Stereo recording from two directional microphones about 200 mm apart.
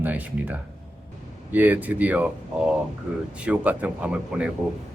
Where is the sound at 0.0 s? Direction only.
10° right (ahead or behind).